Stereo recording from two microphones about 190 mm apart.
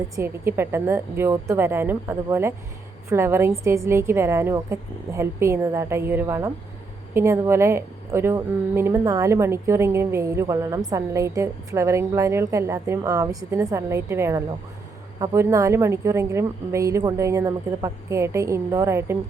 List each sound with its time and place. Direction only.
0.2 s a woman's voice: 10° right (ahead or behind)